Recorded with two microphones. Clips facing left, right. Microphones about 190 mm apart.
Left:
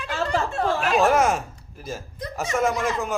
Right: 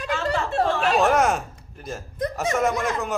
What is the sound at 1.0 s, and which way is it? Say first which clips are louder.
A man's voice: left 2 dB; centre (ahead or behind).